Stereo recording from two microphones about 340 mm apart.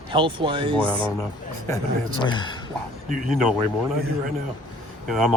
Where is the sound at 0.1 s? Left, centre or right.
Centre.